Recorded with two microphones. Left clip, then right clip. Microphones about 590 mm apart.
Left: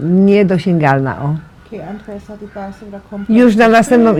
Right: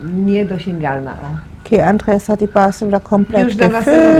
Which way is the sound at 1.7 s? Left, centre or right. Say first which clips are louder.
Right 16 dB; right.